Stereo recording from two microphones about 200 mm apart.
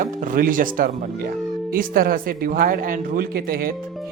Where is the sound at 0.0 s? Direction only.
40° right (ahead or behind).